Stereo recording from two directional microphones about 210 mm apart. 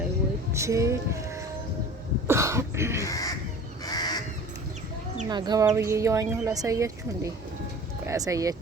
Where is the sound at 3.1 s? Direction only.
15° left (ahead or behind).